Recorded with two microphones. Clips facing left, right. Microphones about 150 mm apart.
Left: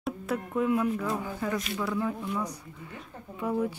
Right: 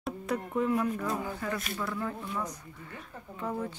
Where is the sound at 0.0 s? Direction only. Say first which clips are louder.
Left 1 dB; centre (ahead or behind).